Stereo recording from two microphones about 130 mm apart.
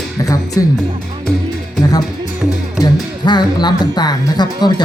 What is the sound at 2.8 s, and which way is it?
Speech, 35° left (ahead or behind).